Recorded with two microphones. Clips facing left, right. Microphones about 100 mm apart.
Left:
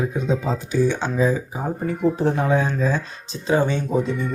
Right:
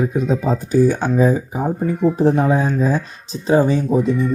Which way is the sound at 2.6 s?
10° right (ahead or behind).